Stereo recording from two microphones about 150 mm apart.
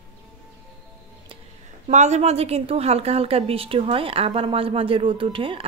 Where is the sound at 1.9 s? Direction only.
50° right (ahead or behind).